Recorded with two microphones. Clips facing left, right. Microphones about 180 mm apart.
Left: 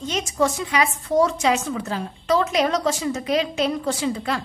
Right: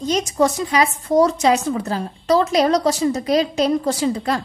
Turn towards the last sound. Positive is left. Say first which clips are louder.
# right 4 dB
turn(degrees=-40)  # may be behind; listen again after turning